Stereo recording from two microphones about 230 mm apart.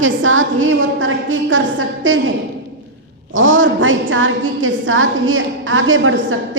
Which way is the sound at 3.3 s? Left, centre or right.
Right.